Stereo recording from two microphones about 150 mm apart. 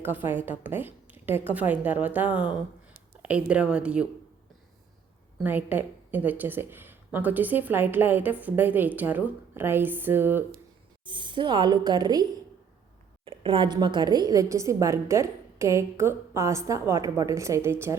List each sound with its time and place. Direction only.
0.0 s a woman's voice: 15° right (ahead or behind)
5.4 s a woman's voice: 10° right (ahead or behind)
11.0 s a woman's voice: 30° right (ahead or behind)
13.2 s a woman's voice: 35° right (ahead or behind); by 17.9 s 15° right (ahead or behind)